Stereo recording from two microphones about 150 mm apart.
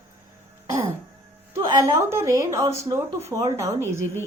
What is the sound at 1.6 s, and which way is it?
A woman's voice, 20° right (ahead or behind).